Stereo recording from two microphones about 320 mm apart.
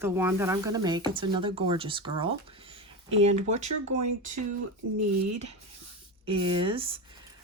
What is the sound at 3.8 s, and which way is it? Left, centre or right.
Speech, right.